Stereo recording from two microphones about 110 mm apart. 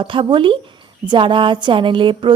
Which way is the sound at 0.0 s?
50° right (ahead or behind).